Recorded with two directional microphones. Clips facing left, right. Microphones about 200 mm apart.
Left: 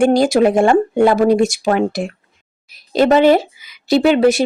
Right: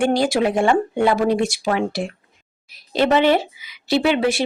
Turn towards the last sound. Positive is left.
turn(degrees=45)  # may be behind; listen again after turning